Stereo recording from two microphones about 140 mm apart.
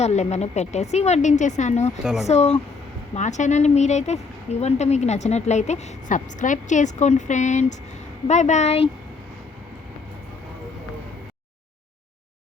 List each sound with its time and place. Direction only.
0.0 s a woman's voice: 55° left (ahead or behind)